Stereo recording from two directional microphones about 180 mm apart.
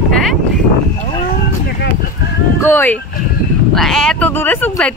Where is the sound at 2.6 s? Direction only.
10° left (ahead or behind).